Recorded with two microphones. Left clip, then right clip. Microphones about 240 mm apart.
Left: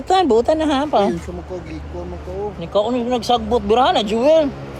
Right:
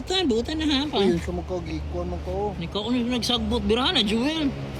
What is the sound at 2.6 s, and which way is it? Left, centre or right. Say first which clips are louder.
Speech: left 9 dB; centre.